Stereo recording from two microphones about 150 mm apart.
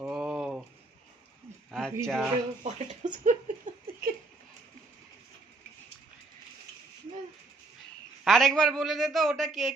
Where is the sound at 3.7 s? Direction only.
60° right (ahead or behind).